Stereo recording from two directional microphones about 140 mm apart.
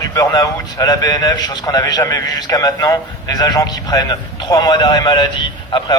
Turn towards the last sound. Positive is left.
turn(degrees=35)  # may be behind; listen again after turning